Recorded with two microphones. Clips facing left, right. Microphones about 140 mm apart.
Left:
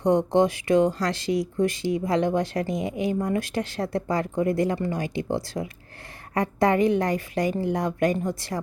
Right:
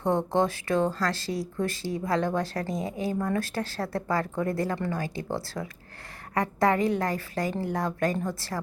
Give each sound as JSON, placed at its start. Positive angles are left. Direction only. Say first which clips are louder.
{"t": 0.0, "sound": "speech", "louder": "left 5 dB", "side_deg": 15}